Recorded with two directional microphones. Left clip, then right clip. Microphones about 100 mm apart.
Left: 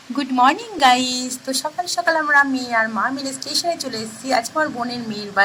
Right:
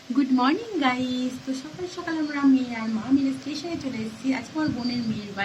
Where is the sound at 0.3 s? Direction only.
15° left (ahead or behind).